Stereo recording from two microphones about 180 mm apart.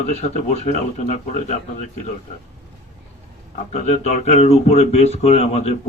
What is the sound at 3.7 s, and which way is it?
Speech, 35° left (ahead or behind).